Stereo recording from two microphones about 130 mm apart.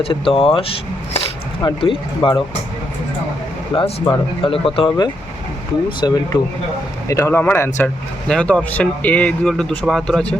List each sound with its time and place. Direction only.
0.0 s speech: 45° left (ahead or behind)
4.1 s speech: 40° left (ahead or behind)
7.1 s speech: 20° left (ahead or behind)
8.3 s speech: 5° left (ahead or behind)